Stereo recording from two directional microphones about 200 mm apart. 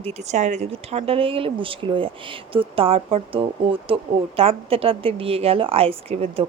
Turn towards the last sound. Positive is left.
turn(degrees=-30)  # may be behind; listen again after turning